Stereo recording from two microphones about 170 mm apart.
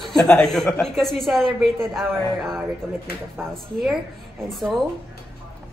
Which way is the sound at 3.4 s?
15° right (ahead or behind).